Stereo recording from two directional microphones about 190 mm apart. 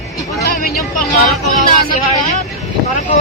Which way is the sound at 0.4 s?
50° left (ahead or behind).